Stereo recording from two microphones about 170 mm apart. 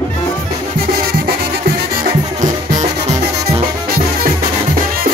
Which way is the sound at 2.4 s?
45° right (ahead or behind).